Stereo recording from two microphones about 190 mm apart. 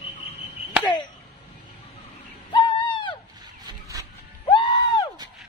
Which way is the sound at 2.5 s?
25° left (ahead or behind).